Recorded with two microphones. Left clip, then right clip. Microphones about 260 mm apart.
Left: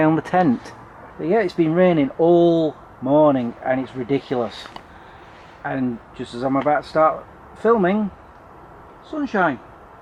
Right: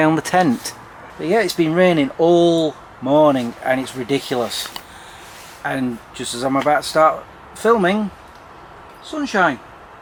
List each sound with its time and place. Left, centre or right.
0.0 s speech: centre
2.6 s speech: left
3.2 s speech: centre
5.6 s speech: centre
9.0 s speech: centre